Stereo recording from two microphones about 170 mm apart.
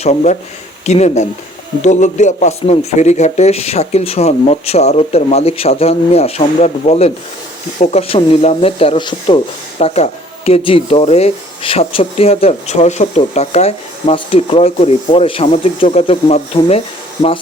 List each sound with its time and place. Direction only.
0.0 s speech: 40° left (ahead or behind)